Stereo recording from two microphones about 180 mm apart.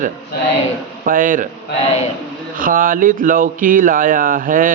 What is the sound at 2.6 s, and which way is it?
Speech, 50° right (ahead or behind).